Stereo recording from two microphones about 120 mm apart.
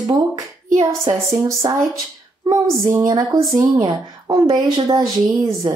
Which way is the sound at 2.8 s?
25° right (ahead or behind).